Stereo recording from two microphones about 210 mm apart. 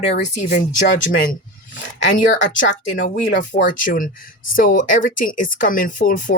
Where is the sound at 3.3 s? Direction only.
35° left (ahead or behind).